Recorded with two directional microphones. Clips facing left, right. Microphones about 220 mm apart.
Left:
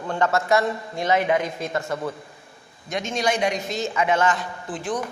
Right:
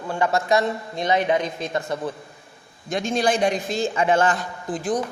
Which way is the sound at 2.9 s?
35° right (ahead or behind).